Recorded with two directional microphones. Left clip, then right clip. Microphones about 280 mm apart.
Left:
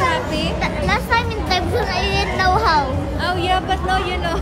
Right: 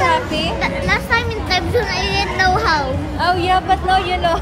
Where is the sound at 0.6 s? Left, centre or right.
Centre.